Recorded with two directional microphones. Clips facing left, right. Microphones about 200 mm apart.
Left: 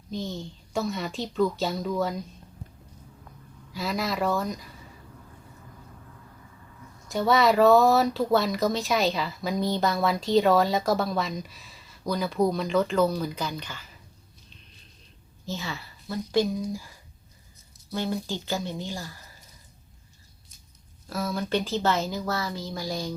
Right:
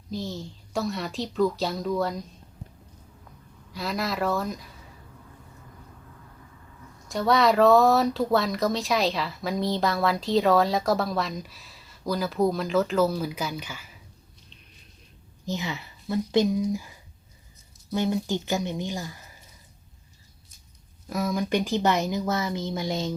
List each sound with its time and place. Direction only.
0.1 s speech: centre (ahead or behind)
3.7 s speech: centre (ahead or behind)
7.1 s speech: centre (ahead or behind)
15.4 s speech: 20° right (ahead or behind)
17.9 s speech: 15° right (ahead or behind)
21.1 s speech: 15° right (ahead or behind)